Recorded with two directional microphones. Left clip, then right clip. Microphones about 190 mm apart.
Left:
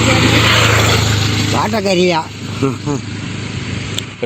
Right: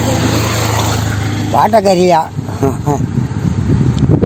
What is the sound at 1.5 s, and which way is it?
Speech, 55° right (ahead or behind).